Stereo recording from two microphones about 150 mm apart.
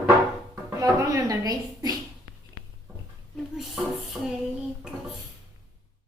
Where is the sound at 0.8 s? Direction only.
25° right (ahead or behind).